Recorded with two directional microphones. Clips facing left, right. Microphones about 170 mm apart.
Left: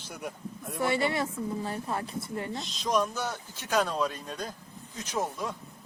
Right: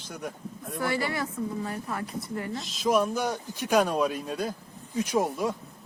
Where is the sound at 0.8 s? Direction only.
25° left (ahead or behind).